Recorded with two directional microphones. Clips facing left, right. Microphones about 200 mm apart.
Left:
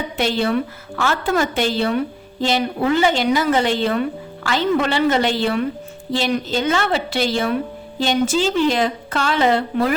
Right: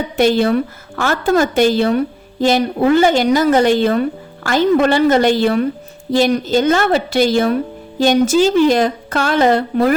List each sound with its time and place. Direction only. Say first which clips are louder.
0.2 s a woman's voice: right 6 dB; 45° right (ahead or behind)